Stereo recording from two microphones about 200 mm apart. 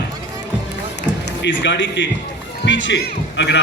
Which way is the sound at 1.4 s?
60° left (ahead or behind).